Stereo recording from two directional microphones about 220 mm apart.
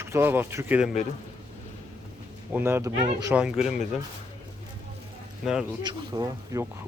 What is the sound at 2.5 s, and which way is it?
Speech, 10° right (ahead or behind).